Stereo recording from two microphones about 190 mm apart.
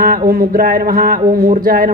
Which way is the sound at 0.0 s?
50° right (ahead or behind).